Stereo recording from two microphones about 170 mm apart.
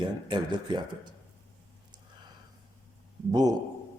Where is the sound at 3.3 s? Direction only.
20° right (ahead or behind).